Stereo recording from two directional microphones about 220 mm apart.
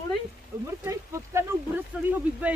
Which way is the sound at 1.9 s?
5° right (ahead or behind).